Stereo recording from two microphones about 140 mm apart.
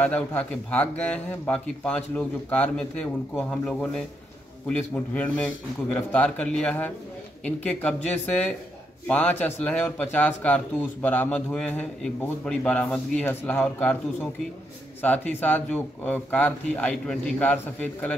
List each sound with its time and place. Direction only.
0.0 s speech: 10° left (ahead or behind)
15.0 s speech: 10° left (ahead or behind)